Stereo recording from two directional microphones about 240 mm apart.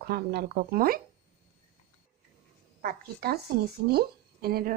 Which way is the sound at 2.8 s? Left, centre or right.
Right.